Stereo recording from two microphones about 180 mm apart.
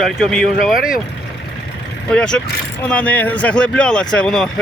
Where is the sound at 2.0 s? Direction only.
5° left (ahead or behind).